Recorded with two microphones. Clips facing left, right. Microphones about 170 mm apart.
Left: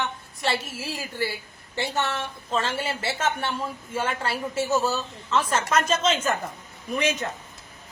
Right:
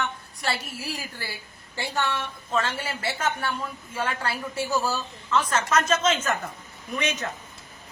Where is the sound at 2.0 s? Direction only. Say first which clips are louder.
Right 3 dB; 25° left (ahead or behind).